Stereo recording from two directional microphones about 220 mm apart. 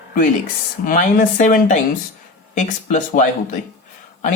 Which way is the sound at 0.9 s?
35° left (ahead or behind).